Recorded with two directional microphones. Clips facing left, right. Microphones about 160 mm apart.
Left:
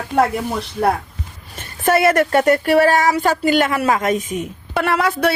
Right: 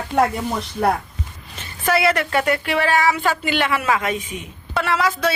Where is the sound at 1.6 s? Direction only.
45° left (ahead or behind).